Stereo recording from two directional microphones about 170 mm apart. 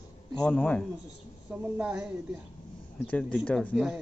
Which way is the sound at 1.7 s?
10° right (ahead or behind).